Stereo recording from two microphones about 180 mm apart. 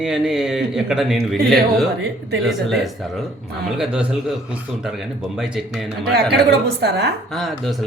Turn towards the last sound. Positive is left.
turn(degrees=0)  # may be behind; listen again after turning